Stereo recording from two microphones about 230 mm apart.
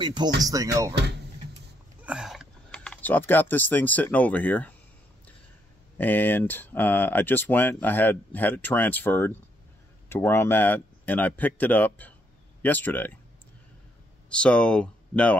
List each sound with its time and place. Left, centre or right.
0.0 s speech: centre
2.0 s speech: centre
5.9 s speech: centre
14.3 s speech: centre